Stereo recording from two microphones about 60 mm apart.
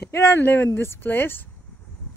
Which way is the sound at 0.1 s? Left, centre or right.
Left.